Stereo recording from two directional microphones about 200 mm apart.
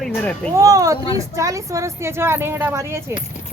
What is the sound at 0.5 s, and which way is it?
Speech, 15° right (ahead or behind).